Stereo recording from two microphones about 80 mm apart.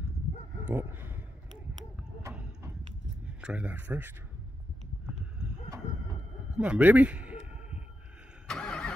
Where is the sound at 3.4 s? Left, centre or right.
Centre.